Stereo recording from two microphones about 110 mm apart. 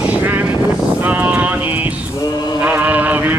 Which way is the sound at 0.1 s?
15° right (ahead or behind).